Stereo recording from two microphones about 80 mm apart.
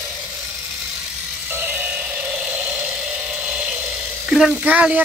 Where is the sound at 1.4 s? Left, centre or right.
Right.